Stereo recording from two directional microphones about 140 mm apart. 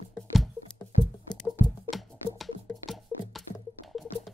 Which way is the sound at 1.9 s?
Centre (ahead or behind).